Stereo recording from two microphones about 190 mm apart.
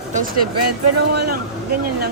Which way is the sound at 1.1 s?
55° right (ahead or behind).